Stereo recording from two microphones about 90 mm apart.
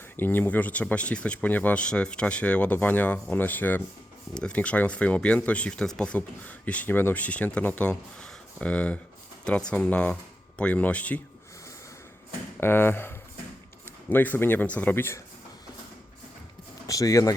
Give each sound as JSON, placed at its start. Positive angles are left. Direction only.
{"t": 0.2, "sound": "speech", "side_deg": 20}
{"t": 12.5, "sound": "speech", "side_deg": 25}
{"t": 16.8, "sound": "speech", "side_deg": 40}